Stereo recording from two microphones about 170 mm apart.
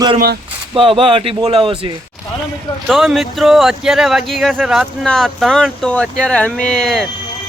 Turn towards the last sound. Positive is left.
turn(degrees=5)  # may be behind; listen again after turning